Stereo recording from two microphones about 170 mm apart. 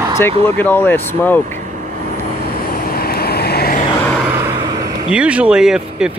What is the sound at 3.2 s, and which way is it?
Vehicle, 65° left (ahead or behind).